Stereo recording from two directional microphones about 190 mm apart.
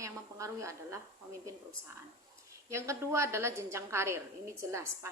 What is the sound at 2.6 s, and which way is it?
A woman's voice, 15° right (ahead or behind).